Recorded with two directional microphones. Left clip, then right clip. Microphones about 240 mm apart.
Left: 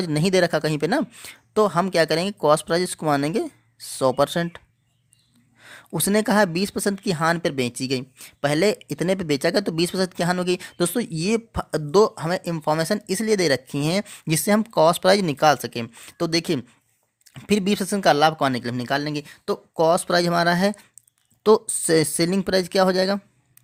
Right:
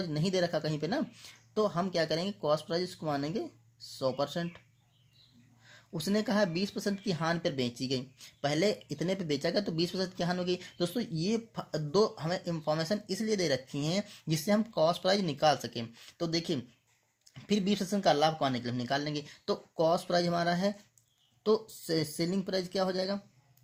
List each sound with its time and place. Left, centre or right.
0.0 s speech: left
5.6 s speech: left